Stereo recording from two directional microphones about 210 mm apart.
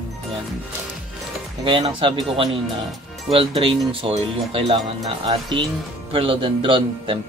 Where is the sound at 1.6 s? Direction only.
25° right (ahead or behind).